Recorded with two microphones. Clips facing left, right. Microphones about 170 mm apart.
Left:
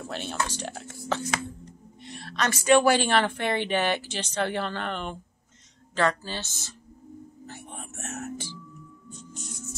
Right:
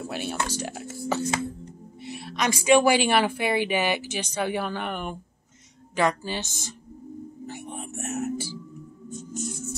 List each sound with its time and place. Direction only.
0.0 s speech: 10° right (ahead or behind)
7.4 s music: 10° right (ahead or behind)
9.3 s music: 45° right (ahead or behind)